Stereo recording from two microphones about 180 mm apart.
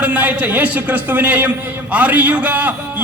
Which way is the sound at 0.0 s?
10° right (ahead or behind).